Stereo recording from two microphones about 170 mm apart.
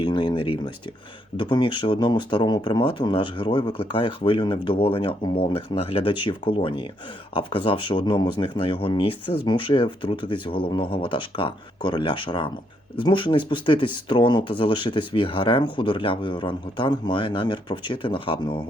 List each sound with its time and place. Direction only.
0.0 s speech: 25° left (ahead or behind)